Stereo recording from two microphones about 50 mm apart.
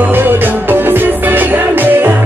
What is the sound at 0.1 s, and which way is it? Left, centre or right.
Music, right.